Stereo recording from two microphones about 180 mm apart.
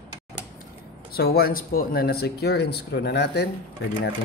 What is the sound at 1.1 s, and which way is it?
Speech, 60° left (ahead or behind).